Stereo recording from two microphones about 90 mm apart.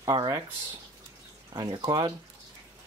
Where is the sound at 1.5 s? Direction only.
45° right (ahead or behind).